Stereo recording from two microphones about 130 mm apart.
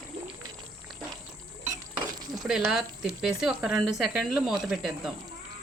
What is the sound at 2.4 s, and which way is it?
Speech, 5° right (ahead or behind).